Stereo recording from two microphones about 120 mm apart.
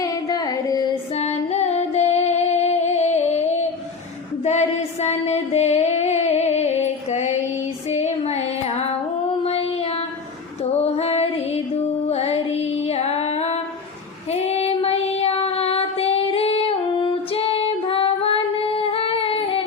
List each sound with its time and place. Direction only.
0.0 s carnatic music: 30° left (ahead or behind)
1.1 s music: 65° left (ahead or behind)
4.4 s a sound: 65° left (ahead or behind)
7.9 s child singing: 65° left (ahead or behind)
10.6 s female singing: 60° left (ahead or behind)
14.3 s child singing: 60° left (ahead or behind)